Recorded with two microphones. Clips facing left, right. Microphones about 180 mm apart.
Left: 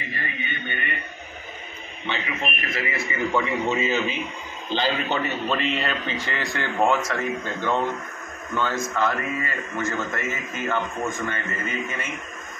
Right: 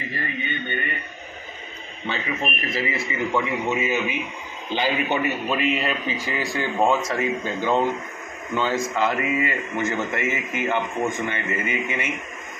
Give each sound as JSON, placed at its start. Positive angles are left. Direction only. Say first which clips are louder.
{"t": 2.0, "sound": "a man's voice", "louder": "right 2 dB", "side_deg": -40}